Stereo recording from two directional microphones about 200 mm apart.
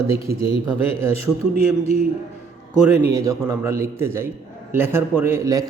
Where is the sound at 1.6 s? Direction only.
30° left (ahead or behind).